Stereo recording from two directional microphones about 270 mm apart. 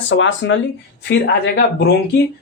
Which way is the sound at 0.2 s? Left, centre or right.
Left.